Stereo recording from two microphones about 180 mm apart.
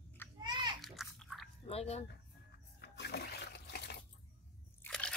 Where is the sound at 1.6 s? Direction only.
35° left (ahead or behind).